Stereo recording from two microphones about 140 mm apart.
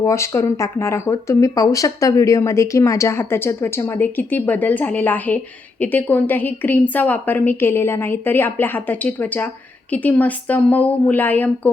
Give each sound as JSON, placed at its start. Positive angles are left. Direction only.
{"t": 0.0, "sound": "a woman's voice", "side_deg": 20}